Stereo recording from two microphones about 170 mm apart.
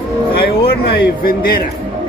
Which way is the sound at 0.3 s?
65° left (ahead or behind).